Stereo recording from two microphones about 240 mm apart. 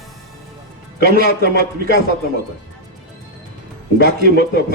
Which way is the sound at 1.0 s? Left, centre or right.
Right.